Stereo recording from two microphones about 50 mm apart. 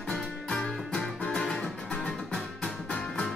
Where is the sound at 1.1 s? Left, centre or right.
Centre.